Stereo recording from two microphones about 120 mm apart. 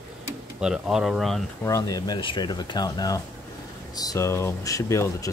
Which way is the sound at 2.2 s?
40° left (ahead or behind).